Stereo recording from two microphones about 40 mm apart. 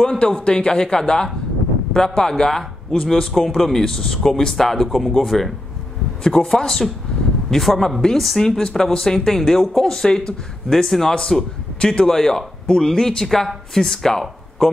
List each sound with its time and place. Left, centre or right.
0.0 s a man's voice: centre
11.8 s a man's voice: left
12.2 s speech: centre